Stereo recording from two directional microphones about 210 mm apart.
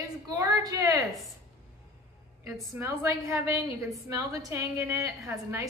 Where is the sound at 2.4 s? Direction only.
Centre (ahead or behind).